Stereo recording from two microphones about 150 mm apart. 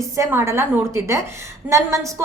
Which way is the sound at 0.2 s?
15° right (ahead or behind).